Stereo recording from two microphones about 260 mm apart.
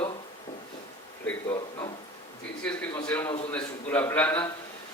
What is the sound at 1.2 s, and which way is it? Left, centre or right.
Speech, centre.